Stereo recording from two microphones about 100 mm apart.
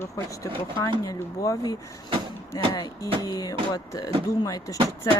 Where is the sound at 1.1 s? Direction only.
35° left (ahead or behind).